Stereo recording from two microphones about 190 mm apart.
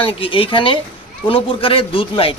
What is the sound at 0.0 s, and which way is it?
Speech, 30° left (ahead or behind).